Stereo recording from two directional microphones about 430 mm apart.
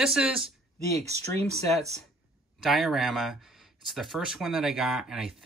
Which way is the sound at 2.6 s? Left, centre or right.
Centre.